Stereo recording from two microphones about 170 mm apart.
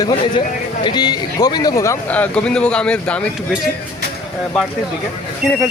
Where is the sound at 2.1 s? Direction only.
10° left (ahead or behind).